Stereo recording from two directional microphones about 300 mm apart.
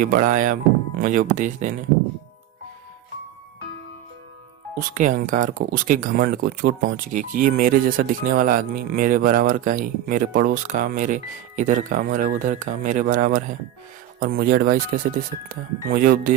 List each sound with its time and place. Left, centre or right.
0.0 s speech: right
4.7 s speech: right